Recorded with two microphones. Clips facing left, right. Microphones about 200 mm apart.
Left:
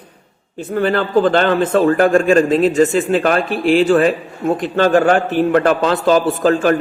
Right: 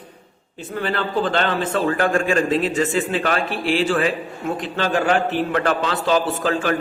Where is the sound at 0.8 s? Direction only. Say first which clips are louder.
Left 8 dB; 45° left (ahead or behind).